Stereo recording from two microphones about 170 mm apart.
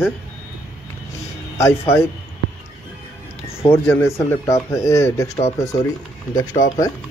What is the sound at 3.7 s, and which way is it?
Speech, 15° left (ahead or behind).